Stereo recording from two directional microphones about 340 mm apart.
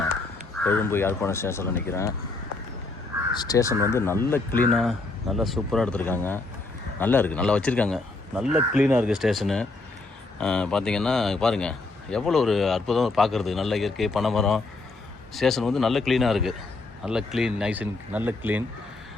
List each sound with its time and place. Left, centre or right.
0.6 s speech: centre
3.3 s a man's voice: centre